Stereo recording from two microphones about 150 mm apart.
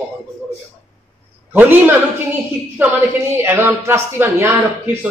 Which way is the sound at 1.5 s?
15° right (ahead or behind).